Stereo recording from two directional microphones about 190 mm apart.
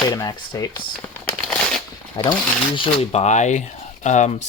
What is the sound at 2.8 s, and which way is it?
Speech, 35° left (ahead or behind).